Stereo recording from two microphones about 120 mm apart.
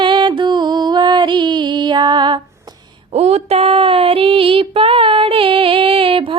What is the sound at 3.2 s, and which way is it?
Female singing, 60° right (ahead or behind).